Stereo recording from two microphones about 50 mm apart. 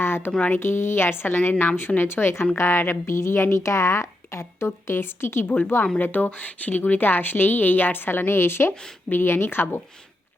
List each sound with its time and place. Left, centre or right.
0.0 s a sound: left
0.5 s a woman's voice: left
6.0 s a woman's voice: left
8.7 s speech: centre
9.0 s a woman's voice: left